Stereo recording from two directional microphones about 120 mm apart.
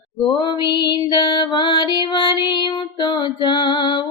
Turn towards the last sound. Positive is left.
turn(degrees=40)  # may be behind; listen again after turning